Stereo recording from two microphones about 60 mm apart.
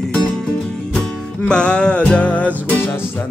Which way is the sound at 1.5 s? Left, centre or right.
Centre.